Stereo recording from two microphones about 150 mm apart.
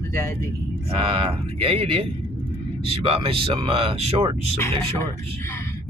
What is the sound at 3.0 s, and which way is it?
Speech, 35° right (ahead or behind).